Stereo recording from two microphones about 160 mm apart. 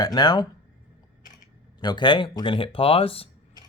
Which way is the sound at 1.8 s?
30° left (ahead or behind).